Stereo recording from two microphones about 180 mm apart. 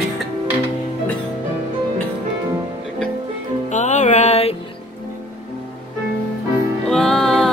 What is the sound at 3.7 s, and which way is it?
Music, 40° left (ahead or behind).